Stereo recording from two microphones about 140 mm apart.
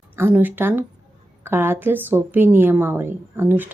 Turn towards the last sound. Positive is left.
turn(degrees=-15)  # may be behind; listen again after turning